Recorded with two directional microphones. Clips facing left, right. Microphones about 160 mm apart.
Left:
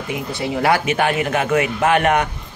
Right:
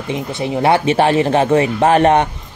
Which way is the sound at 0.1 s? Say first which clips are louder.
Right 3 dB; 25° right (ahead or behind).